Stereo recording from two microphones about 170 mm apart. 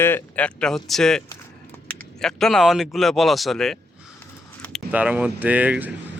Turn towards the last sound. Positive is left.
turn(degrees=-10)  # may be behind; listen again after turning